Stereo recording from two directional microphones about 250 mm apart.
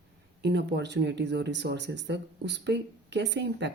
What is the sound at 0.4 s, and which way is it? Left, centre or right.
Speech, right.